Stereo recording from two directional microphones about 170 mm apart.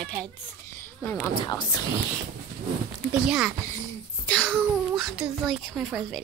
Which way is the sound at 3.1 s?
5° right (ahead or behind).